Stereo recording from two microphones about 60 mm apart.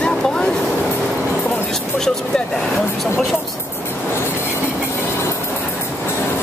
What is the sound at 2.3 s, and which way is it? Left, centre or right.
Speech, centre.